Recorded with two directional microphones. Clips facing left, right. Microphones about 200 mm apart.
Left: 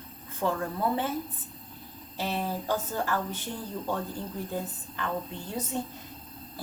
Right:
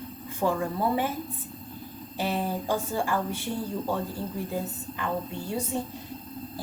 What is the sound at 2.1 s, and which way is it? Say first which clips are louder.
Speech: right 3 dB; 15° right (ahead or behind).